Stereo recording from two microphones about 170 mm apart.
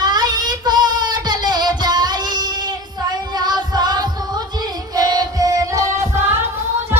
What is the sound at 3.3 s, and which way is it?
Music, 25° right (ahead or behind).